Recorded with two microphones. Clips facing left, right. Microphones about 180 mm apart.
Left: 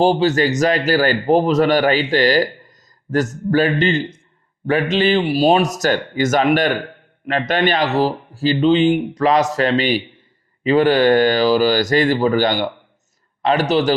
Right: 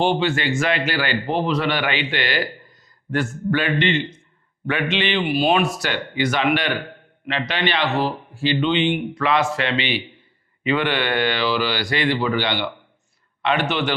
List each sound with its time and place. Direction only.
0.0 s speech: 40° left (ahead or behind)